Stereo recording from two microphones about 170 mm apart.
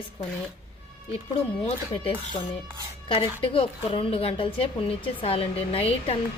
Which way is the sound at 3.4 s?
30° left (ahead or behind).